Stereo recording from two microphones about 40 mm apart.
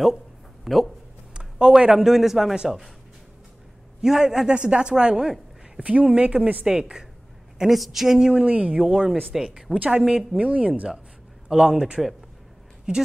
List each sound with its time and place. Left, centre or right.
0.7 s a woman's voice: centre
1.3 s speech: centre
4.0 s a woman's voice: centre
5.8 s a woman's voice: right
6.6 s speech: centre
7.7 s speech: centre
8.4 s speech: right
8.8 s a woman's voice: centre
10.0 s speech: centre
10.4 s speech: right
11.4 s a woman's voice: centre